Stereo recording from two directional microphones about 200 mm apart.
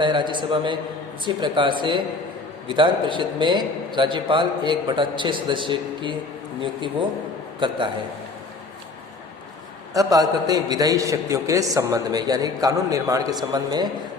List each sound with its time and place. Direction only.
0.0 s a man's voice: 25° right (ahead or behind)
9.9 s a man's voice: 20° right (ahead or behind)